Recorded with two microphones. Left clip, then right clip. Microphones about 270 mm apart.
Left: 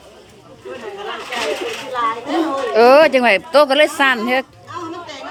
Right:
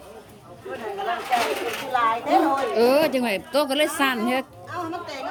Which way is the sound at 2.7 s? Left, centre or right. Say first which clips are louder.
Left 13 dB; centre.